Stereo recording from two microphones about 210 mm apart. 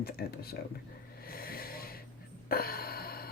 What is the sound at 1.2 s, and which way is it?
Snort, 45° left (ahead or behind).